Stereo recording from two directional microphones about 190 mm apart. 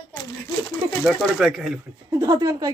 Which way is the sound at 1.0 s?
Centre (ahead or behind).